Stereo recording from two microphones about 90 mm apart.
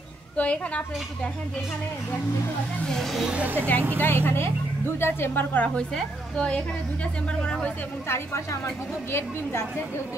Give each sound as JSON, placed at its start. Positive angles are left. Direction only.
{"t": 0.4, "sound": "speech", "side_deg": 15}
{"t": 2.8, "sound": "speech", "side_deg": 5}
{"t": 3.3, "sound": "speech", "side_deg": -20}
{"t": 4.0, "sound": "speech", "side_deg": 25}
{"t": 5.8, "sound": "speech", "side_deg": 10}
{"t": 8.1, "sound": "a woman's voice", "side_deg": 35}